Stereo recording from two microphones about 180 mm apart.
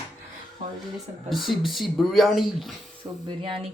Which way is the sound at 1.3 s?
Centre (ahead or behind).